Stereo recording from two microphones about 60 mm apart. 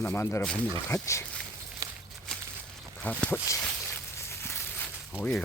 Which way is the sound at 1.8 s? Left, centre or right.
Right.